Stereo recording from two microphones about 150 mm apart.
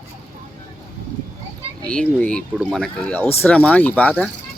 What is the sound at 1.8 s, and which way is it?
Speech, 10° left (ahead or behind).